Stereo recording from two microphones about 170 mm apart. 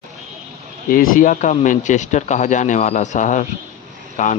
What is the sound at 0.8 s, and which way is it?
Speech, 55° left (ahead or behind).